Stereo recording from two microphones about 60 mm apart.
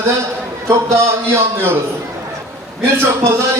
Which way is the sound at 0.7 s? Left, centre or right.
Right.